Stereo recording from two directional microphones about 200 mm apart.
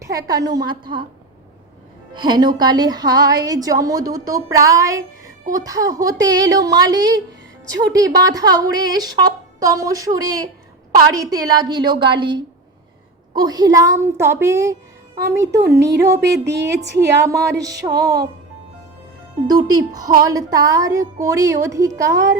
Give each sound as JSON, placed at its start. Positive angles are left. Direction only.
{"t": 0.0, "sound": "a woman's voice", "side_deg": -15}
{"t": 2.1, "sound": "a woman's voice", "side_deg": -20}
{"t": 16.8, "sound": "a woman's voice", "side_deg": -60}
{"t": 17.2, "sound": "speech", "side_deg": -15}
{"t": 19.5, "sound": "a woman's voice", "side_deg": -20}